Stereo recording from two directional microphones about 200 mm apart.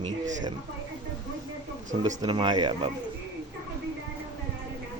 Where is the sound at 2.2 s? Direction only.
20° right (ahead or behind).